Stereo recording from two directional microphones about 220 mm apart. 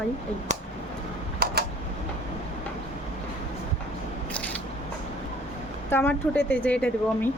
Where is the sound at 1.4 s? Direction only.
40° right (ahead or behind).